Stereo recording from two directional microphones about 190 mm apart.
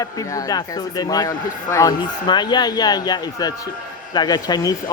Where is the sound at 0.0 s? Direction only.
20° left (ahead or behind).